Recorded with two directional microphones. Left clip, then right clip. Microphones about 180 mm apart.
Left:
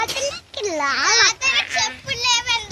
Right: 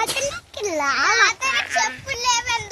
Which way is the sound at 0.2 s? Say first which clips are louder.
Left 1 dB; 45° right (ahead or behind).